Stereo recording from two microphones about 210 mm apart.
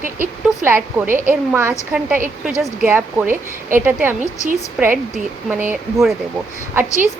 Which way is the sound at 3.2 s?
40° right (ahead or behind).